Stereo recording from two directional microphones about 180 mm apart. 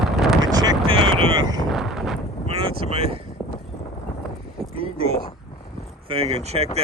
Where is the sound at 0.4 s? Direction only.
20° right (ahead or behind).